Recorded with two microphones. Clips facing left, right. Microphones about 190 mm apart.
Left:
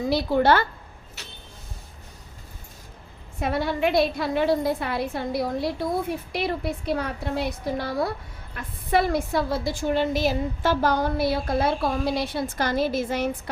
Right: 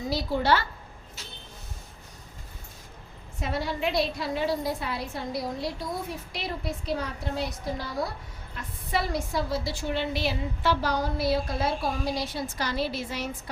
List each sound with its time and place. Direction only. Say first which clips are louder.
0.1 s a woman's voice: left 5 dB; 60° left (ahead or behind)
1.2 s a sound: left 2 dB; 70° left (ahead or behind)
3.4 s a woman's voice: left 5 dB; 55° left (ahead or behind)